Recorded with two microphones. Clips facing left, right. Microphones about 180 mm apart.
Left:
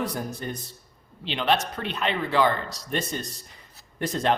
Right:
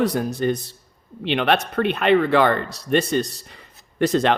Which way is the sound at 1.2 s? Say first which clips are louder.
Right 5 dB; 65° right (ahead or behind).